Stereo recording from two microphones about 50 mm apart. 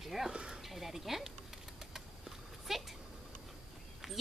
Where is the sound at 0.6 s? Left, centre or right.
Centre.